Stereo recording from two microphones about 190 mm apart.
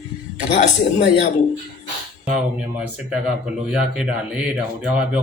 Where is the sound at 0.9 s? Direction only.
65° left (ahead or behind).